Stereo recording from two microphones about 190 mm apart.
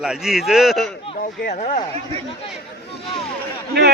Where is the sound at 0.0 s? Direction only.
Centre (ahead or behind).